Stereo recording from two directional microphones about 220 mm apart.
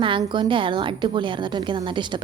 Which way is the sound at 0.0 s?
20° right (ahead or behind).